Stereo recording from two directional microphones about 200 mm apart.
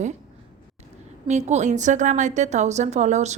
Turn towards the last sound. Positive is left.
turn(degrees=-35)  # may be behind; listen again after turning